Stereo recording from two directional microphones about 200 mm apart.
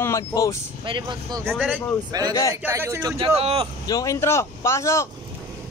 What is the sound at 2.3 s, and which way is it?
Speech, 15° left (ahead or behind).